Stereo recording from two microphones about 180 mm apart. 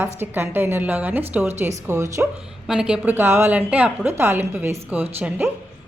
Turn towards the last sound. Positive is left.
turn(degrees=-10)  # may be behind; listen again after turning